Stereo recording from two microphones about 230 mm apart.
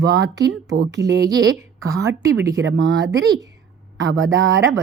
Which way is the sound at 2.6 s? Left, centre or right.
Right.